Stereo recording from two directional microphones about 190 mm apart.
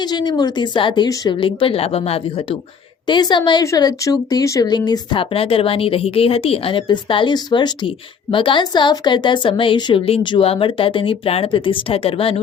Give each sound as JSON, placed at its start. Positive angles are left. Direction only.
{"t": 0.0, "sound": "speech", "side_deg": 20}